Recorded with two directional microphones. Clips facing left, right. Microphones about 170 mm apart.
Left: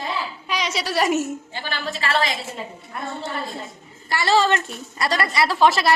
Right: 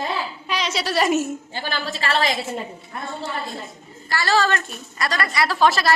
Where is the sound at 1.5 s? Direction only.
35° right (ahead or behind).